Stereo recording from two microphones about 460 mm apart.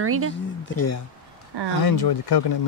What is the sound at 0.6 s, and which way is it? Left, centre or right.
Speech, left.